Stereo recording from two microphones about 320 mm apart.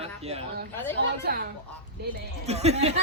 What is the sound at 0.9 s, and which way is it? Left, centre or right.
Speech, right.